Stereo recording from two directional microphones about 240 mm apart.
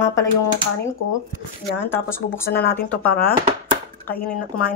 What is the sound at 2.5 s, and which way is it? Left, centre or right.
Speech, left.